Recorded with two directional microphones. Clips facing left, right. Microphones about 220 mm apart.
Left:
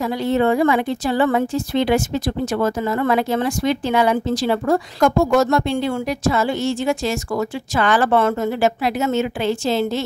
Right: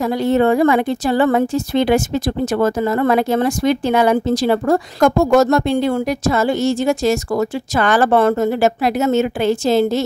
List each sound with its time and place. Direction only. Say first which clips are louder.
0.0 s a woman's voice: right 3 dB; 45° right (ahead or behind)